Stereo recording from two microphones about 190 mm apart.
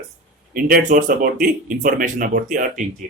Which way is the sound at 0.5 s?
45° right (ahead or behind).